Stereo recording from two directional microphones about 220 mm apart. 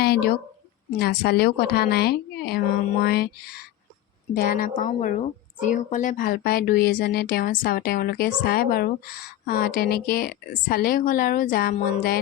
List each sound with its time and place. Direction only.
0.0 s speech: 45° left (ahead or behind)